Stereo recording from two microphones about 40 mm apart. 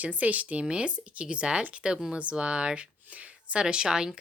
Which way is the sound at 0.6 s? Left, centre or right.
Right.